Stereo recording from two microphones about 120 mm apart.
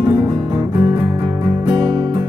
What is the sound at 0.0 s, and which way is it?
Music, 40° right (ahead or behind).